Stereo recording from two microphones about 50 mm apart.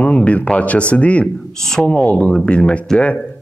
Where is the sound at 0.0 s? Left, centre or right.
Left.